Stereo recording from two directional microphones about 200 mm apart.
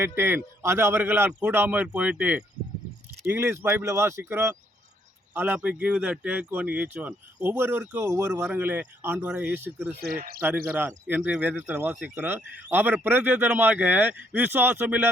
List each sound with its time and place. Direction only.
0.0 s speech: 10° right (ahead or behind)
10.0 s speech: 50° right (ahead or behind)
10.8 s speech: 10° right (ahead or behind)